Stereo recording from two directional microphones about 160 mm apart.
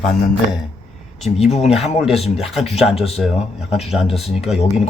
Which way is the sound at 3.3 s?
40° left (ahead or behind).